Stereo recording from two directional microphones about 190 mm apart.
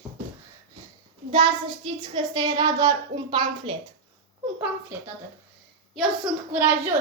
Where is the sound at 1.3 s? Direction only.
25° right (ahead or behind).